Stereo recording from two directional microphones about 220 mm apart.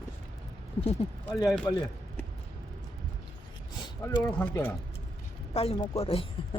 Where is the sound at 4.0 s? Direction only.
5° left (ahead or behind).